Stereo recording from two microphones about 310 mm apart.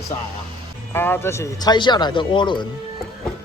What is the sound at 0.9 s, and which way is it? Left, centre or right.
A man's voice, centre.